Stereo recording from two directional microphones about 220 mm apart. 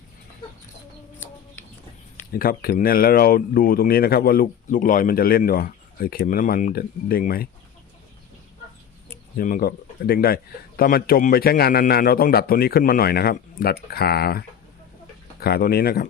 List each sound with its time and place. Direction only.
2.3 s speech: 40° left (ahead or behind)
9.4 s speech: 40° left (ahead or behind)